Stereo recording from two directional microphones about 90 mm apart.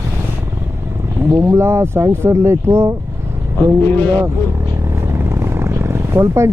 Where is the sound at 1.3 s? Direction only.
30° right (ahead or behind).